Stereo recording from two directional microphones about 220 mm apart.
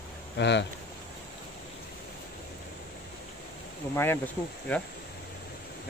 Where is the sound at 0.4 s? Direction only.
50° left (ahead or behind).